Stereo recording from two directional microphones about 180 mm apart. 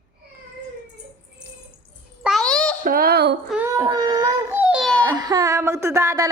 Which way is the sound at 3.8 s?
25° right (ahead or behind).